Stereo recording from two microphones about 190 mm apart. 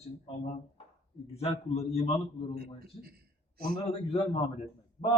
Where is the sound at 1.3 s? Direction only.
30° left (ahead or behind).